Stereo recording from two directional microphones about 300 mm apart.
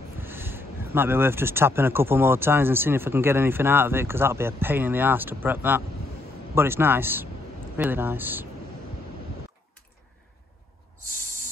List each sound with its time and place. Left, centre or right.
0.2 s speech: centre